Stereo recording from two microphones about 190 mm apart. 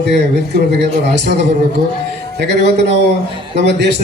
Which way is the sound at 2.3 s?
60° right (ahead or behind).